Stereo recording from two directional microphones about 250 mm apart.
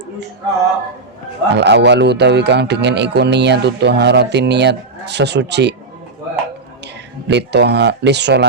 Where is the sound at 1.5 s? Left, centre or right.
Right.